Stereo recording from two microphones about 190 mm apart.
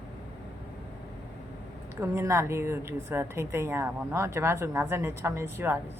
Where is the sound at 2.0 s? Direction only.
15° right (ahead or behind).